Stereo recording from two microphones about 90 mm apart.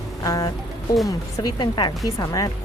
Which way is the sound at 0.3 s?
45° left (ahead or behind).